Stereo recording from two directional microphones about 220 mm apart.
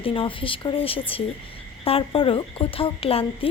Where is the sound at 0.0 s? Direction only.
25° left (ahead or behind).